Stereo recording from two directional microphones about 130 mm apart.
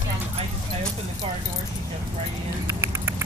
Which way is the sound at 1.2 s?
45° right (ahead or behind).